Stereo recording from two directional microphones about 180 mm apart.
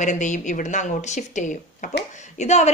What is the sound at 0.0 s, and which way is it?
A woman's voice, 40° left (ahead or behind).